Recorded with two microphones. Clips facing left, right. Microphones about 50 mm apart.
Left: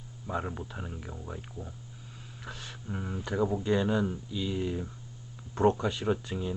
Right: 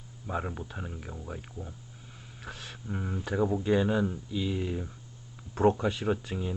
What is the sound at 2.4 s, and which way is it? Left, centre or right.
Speech, right.